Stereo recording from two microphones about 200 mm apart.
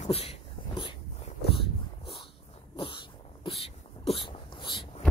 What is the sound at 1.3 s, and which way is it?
Dog, 30° left (ahead or behind).